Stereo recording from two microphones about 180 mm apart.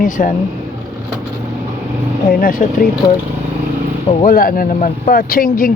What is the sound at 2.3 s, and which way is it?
Speech, 55° left (ahead or behind).